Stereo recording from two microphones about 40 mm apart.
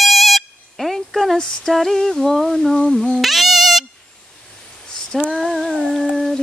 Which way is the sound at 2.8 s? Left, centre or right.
Centre.